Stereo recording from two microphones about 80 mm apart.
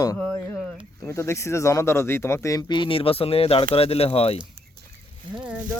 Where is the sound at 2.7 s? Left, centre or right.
Left.